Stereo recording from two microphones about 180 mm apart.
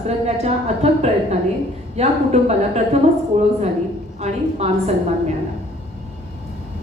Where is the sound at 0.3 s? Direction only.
35° right (ahead or behind).